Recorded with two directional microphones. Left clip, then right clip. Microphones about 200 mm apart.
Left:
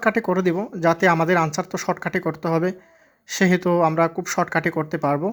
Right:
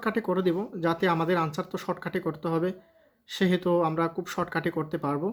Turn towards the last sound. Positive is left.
turn(degrees=30)  # may be behind; listen again after turning